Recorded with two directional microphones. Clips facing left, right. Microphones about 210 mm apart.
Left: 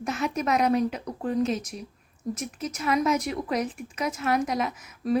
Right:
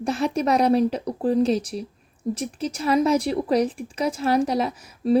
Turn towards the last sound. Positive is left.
turn(degrees=-30)  # may be behind; listen again after turning